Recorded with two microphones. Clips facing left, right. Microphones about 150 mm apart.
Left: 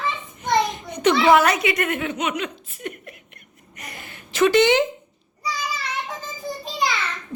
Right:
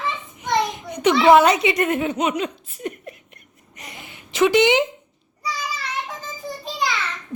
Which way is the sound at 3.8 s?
20° right (ahead or behind).